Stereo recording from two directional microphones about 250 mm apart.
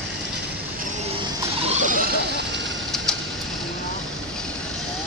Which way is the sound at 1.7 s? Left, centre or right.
Right.